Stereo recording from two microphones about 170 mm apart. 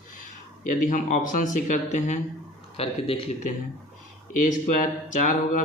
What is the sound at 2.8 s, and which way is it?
Speech, 35° left (ahead or behind).